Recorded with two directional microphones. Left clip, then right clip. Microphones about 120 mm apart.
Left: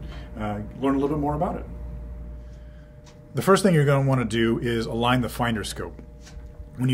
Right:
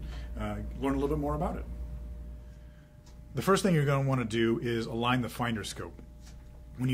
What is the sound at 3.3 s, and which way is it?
Speech, 45° left (ahead or behind).